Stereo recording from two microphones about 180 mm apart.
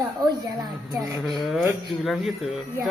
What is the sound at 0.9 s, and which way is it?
Speech, centre (ahead or behind).